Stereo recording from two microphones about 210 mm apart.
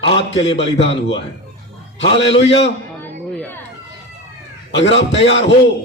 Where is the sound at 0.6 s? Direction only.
25° left (ahead or behind).